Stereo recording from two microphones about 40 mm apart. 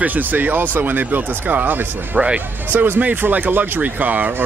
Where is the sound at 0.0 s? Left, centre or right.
Right.